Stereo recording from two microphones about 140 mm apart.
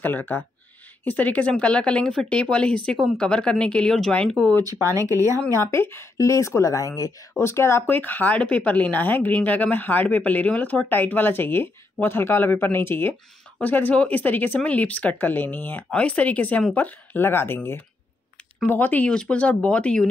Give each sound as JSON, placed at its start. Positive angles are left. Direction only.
{"t": 0.0, "sound": "speech", "side_deg": 15}
{"t": 4.7, "sound": "speech", "side_deg": -20}
{"t": 5.7, "sound": "speech", "side_deg": 20}